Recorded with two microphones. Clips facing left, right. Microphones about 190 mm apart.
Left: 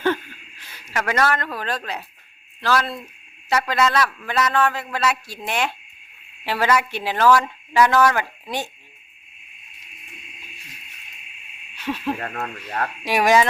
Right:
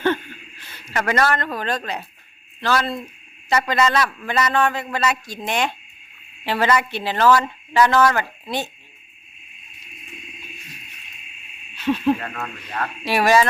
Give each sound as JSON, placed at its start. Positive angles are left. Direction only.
{"t": 0.0, "sound": "a sound", "side_deg": 10}
{"t": 1.5, "sound": "speech", "side_deg": 5}
{"t": 11.8, "sound": "speech", "side_deg": 10}
{"t": 12.2, "sound": "speech", "side_deg": 35}
{"t": 13.1, "sound": "speech", "side_deg": 15}